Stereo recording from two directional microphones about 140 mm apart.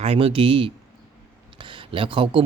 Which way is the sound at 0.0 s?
45° right (ahead or behind).